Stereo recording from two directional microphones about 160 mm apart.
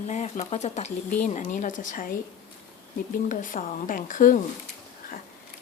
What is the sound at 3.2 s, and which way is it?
Speech, 55° left (ahead or behind).